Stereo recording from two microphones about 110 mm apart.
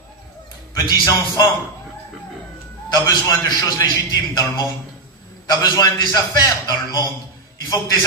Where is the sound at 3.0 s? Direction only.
35° left (ahead or behind).